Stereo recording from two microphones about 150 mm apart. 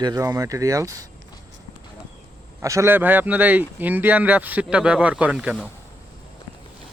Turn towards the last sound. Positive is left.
turn(degrees=-5)  # may be behind; listen again after turning